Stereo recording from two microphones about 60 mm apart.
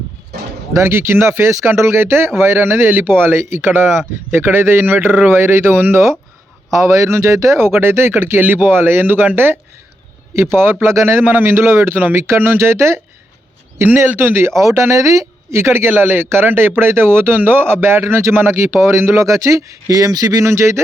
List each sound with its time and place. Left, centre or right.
0.8 s speech: right
5.4 s speech: right
6.7 s speech: right
8.4 s speech: right
13.8 s speech: right
20.5 s speech: right